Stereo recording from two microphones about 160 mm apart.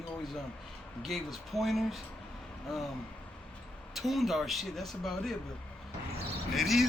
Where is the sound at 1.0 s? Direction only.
Centre (ahead or behind).